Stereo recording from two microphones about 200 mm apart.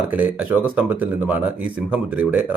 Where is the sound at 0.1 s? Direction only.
5° right (ahead or behind).